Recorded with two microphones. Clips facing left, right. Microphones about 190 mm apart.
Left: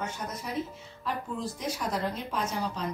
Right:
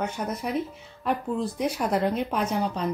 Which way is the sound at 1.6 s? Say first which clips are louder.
Right 7 dB; 60° right (ahead or behind).